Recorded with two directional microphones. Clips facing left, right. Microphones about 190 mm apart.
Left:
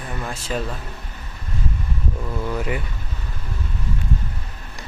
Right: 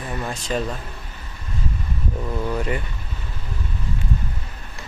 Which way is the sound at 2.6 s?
5° left (ahead or behind).